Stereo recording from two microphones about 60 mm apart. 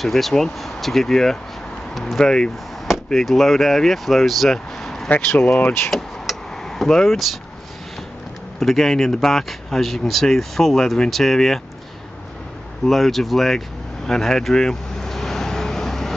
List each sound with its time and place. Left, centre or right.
0.0 s speech: centre
3.1 s speech: centre
5.6 s speech: left
5.9 s a sound: centre
8.5 s speech: centre
12.8 s speech: centre
14.0 s vehicle: centre